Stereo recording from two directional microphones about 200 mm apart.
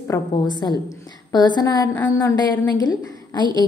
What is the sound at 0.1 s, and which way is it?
A woman's voice, 20° left (ahead or behind).